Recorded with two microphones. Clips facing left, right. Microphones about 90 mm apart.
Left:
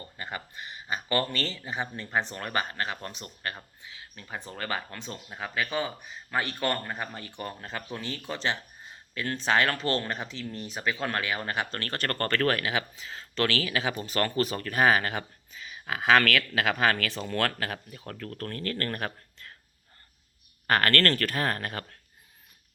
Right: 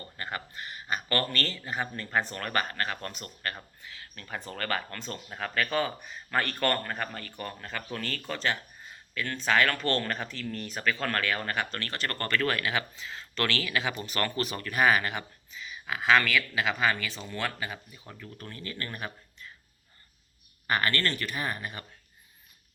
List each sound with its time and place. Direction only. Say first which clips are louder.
0.0 s speech: right 1 dB; 20° left (ahead or behind)
9.8 s speech: even; 20° left (ahead or behind)
11.8 s speech: left 3 dB; 40° left (ahead or behind); by 19.5 s 60° left (ahead or behind)
20.7 s speech: left 4 dB; 70° left (ahead or behind)